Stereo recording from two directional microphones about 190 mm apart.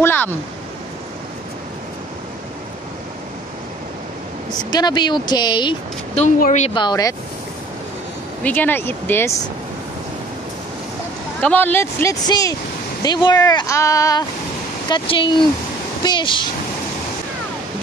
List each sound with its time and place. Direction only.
0.0 s a sound: 10° left (ahead or behind)
4.6 s speech: 20° left (ahead or behind)
6.2 s speech: 40° left (ahead or behind)
6.7 s speech: 20° left (ahead or behind)
8.5 s speech: 10° left (ahead or behind)
11.4 s speech: 10° left (ahead or behind); by 16.4 s 25° left (ahead or behind)